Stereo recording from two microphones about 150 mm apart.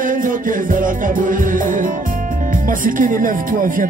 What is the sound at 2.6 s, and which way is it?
Speech, 65° right (ahead or behind).